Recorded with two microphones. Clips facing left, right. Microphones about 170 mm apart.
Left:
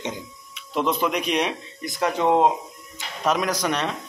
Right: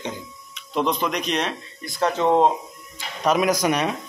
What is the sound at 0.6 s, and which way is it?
Speech, 5° left (ahead or behind).